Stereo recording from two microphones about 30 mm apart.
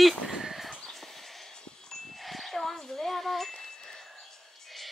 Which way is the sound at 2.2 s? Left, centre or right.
Centre.